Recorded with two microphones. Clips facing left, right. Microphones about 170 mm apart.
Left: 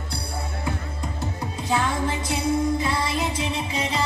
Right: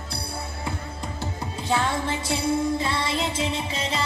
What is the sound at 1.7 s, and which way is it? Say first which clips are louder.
Music: left 1 dB; 30° right (ahead or behind).